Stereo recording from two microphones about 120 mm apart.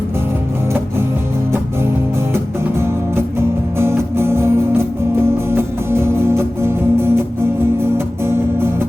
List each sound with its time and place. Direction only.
2.3 s music: 20° right (ahead or behind)